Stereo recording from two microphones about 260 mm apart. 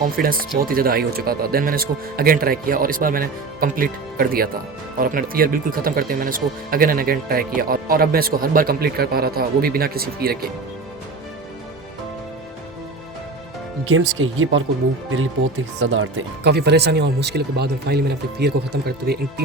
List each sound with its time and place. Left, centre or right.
0.2 s speech: right
13.8 s speech: right
15.8 s speech: right